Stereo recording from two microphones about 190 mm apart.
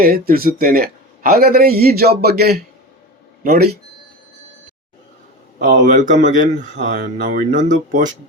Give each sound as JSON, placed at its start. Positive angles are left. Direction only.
{"t": 0.0, "sound": "a man's voice", "side_deg": -50}
{"t": 5.6, "sound": "speech", "side_deg": -40}